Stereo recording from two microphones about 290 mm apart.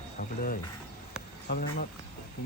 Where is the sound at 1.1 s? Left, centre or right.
Left.